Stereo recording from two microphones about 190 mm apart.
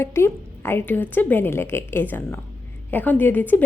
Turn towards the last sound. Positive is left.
turn(degrees=10)  # may be behind; listen again after turning